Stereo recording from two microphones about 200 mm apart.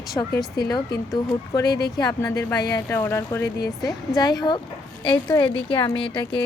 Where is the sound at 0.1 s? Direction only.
20° left (ahead or behind).